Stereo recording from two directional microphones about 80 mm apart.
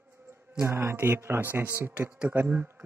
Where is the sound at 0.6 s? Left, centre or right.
Right.